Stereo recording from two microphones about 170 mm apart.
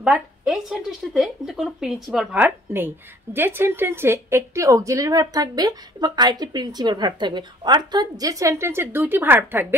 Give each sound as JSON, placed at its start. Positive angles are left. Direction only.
{"t": 0.0, "sound": "a woman's voice", "side_deg": -5}